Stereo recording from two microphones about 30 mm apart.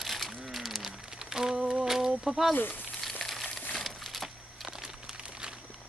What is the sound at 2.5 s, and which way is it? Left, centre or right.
Speech, left.